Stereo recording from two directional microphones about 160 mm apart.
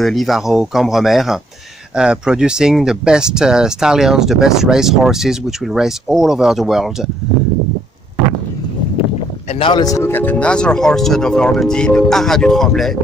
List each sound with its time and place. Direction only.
0.0 s speech: centre (ahead or behind)
9.5 s speech: 35° left (ahead or behind)
9.8 s speech: 15° left (ahead or behind)